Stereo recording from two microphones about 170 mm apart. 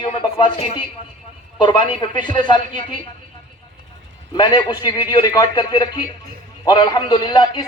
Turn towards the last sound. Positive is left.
turn(degrees=25)  # may be behind; listen again after turning